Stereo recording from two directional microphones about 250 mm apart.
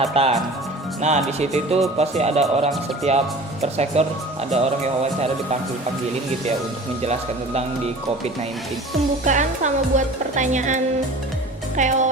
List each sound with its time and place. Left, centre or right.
0.0 s speech: right
7.0 s speech: right
9.2 s speech: right
11.8 s speech: right